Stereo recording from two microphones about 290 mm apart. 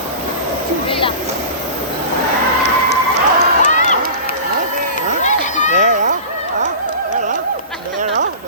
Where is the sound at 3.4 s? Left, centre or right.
Left.